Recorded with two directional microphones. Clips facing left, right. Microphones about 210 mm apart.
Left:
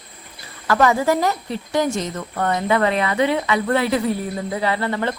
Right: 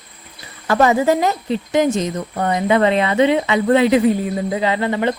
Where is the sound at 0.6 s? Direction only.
20° right (ahead or behind).